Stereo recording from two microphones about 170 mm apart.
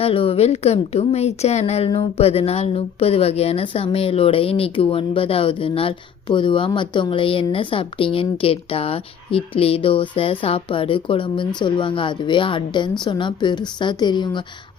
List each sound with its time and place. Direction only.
0.0 s a woman's voice: 35° left (ahead or behind)